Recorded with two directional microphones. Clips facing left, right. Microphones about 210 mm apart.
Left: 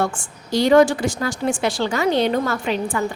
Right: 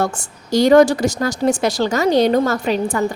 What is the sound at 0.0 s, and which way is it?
A woman's voice, 40° right (ahead or behind).